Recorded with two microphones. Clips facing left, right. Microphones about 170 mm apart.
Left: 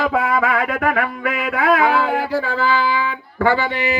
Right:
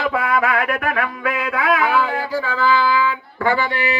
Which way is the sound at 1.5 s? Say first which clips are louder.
Left 3 dB; 45° left (ahead or behind).